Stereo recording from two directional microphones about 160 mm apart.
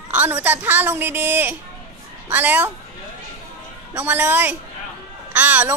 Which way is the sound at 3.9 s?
10° right (ahead or behind).